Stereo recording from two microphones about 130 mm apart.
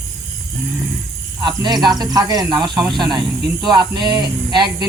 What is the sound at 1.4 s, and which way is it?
Speech, 35° right (ahead or behind).